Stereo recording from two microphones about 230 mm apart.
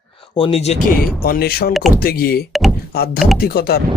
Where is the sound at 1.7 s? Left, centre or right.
Centre.